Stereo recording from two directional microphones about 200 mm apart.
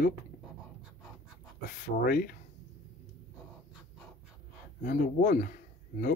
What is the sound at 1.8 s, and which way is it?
Speech, 45° left (ahead or behind).